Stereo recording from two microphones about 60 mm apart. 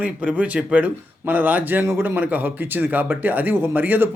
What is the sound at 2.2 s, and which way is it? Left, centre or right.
Speech, right.